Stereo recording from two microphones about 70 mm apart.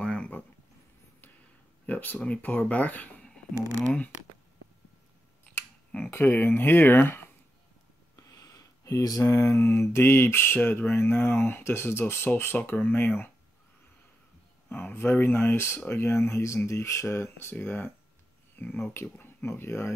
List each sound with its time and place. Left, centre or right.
0.0 s a sound: centre
1.9 s speech: left
6.1 s mantra: left
8.2 s a sound: left
9.2 s mantra: left
12.4 s speech: left
14.7 s mantra: left
17.6 s speech: left